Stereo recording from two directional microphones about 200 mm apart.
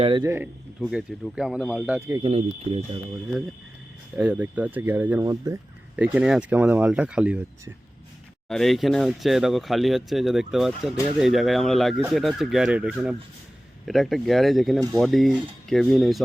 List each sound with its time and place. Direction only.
0.0 s speech: 25° right (ahead or behind)
0.3 s speech: 10° right (ahead or behind)
2.2 s speech: 30° right (ahead or behind)
4.1 s speech: 5° right (ahead or behind)